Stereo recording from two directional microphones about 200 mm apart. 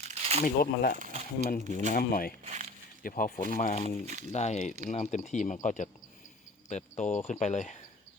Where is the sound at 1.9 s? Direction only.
45° left (ahead or behind).